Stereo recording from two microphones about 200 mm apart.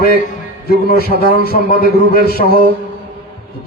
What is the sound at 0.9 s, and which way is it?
Speech, 50° left (ahead or behind).